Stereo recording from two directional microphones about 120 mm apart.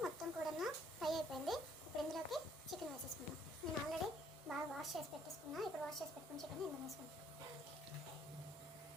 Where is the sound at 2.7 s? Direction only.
Centre (ahead or behind).